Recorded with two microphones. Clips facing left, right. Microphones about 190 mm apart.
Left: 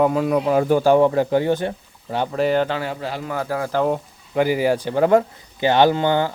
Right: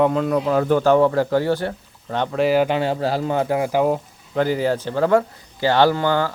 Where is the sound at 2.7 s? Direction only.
25° right (ahead or behind); by 4.0 s 10° right (ahead or behind).